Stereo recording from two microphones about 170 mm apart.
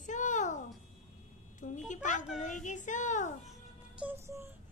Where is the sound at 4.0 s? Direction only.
10° right (ahead or behind).